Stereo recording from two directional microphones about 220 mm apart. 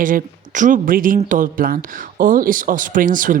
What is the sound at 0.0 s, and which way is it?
Speech, 35° right (ahead or behind).